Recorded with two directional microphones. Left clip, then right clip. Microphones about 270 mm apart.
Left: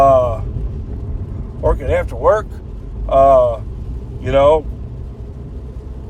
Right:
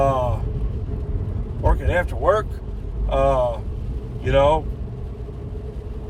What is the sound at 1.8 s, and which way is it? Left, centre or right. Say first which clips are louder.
Speech: left 6 dB; centre.